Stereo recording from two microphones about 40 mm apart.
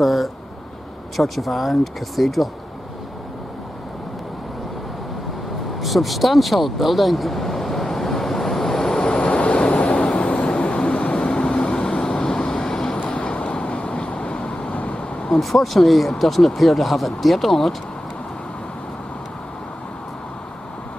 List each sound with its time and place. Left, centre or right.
0.0 s speech: centre
5.8 s vehicle: centre
9.0 s vehicle: left
13.0 s vehicle: left
14.7 s vehicle: left
15.3 s speech: centre